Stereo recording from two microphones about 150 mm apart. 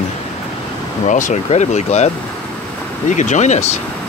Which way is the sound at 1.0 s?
55° left (ahead or behind).